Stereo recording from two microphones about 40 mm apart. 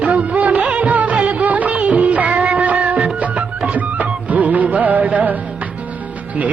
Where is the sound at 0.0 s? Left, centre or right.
Right.